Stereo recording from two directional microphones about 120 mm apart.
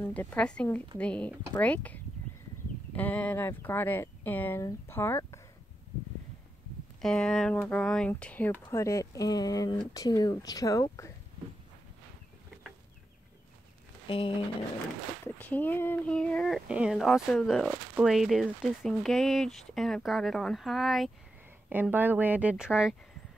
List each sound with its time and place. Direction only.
0.0 s speech: 15° left (ahead or behind)
7.0 s speech: 5° left (ahead or behind); by 11.1 s 25° left (ahead or behind)
14.0 s a sound: 50° left (ahead or behind)
15.2 s speech: 15° left (ahead or behind)
21.9 s speech: 15° right (ahead or behind)